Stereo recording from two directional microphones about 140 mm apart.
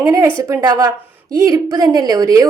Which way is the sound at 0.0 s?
15° right (ahead or behind).